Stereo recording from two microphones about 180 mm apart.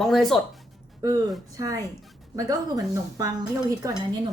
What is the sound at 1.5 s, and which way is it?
Speech, 20° right (ahead or behind).